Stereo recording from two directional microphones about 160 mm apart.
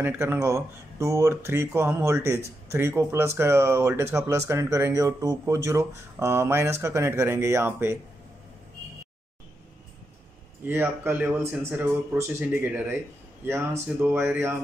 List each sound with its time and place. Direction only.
0.0 s speech: 15° right (ahead or behind)
10.7 s speech: 15° right (ahead or behind)
13.8 s speech: 10° right (ahead or behind)